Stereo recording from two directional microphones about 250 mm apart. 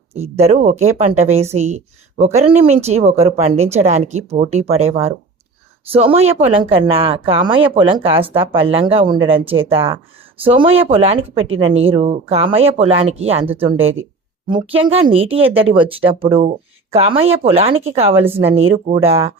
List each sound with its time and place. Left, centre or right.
0.1 s a woman's voice: right
11.4 s speech: right
11.8 s a woman's voice: right